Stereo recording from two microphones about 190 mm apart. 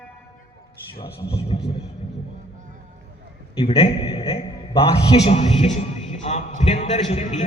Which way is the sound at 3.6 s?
30° left (ahead or behind).